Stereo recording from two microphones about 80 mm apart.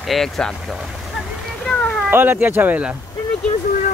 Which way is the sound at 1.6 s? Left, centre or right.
Centre.